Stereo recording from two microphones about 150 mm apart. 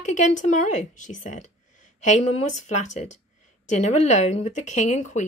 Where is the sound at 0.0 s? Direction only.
55° left (ahead or behind).